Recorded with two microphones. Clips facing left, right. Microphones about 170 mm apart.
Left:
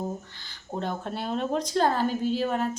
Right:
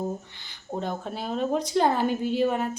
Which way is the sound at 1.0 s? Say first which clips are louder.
Right 1 dB; 5° right (ahead or behind).